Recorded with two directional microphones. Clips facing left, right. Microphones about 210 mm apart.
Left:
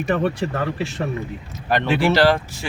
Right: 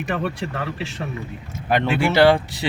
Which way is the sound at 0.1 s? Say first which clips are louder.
Left 5 dB; 40° left (ahead or behind).